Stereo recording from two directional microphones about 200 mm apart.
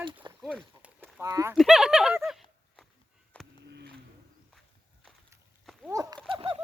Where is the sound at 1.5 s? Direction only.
Centre (ahead or behind).